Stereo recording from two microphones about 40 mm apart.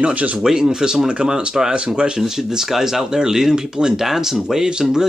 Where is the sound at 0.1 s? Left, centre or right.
Right.